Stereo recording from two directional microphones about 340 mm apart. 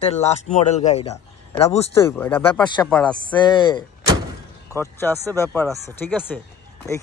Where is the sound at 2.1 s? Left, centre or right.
Centre.